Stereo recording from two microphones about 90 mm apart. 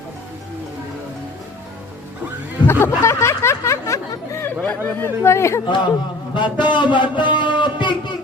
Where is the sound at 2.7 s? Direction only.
30° left (ahead or behind).